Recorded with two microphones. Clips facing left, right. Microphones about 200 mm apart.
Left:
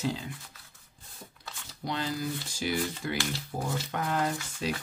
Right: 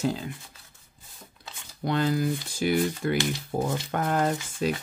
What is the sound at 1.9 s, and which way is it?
Speech, 55° right (ahead or behind).